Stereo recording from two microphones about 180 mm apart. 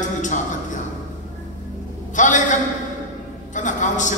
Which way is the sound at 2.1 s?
45° left (ahead or behind).